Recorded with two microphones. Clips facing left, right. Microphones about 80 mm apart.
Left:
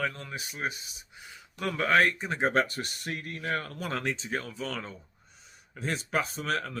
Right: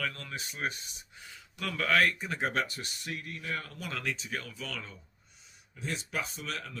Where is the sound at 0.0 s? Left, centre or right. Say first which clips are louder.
Left 4 dB; left.